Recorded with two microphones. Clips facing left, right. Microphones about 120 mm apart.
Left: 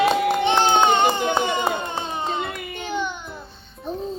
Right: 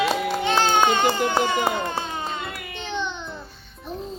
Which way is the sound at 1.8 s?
20° left (ahead or behind).